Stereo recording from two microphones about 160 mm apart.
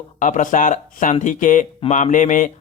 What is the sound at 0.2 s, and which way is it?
Speech, 50° left (ahead or behind).